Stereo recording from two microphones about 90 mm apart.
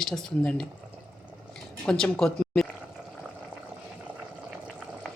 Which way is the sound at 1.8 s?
5° left (ahead or behind).